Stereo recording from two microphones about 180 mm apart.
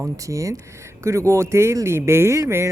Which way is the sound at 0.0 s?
15° right (ahead or behind).